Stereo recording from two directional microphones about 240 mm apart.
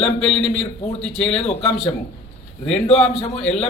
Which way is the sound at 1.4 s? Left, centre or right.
Left.